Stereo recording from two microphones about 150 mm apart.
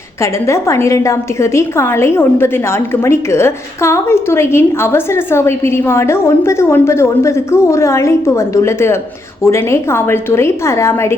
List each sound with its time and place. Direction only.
0.2 s a woman's voice: 20° left (ahead or behind)